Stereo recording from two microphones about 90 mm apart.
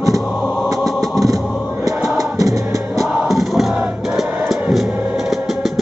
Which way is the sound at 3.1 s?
5° right (ahead or behind).